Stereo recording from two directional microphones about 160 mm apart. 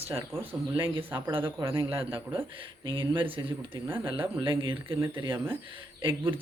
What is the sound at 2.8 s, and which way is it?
Speech, 30° right (ahead or behind).